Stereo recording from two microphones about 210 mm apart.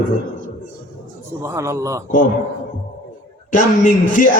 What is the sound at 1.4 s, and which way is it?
Speech, 15° right (ahead or behind).